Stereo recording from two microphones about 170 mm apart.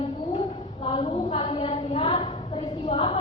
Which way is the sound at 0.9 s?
35° left (ahead or behind).